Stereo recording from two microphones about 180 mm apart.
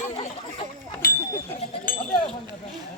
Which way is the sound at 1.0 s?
50° left (ahead or behind).